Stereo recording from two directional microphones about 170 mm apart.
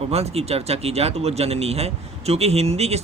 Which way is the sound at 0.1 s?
35° right (ahead or behind).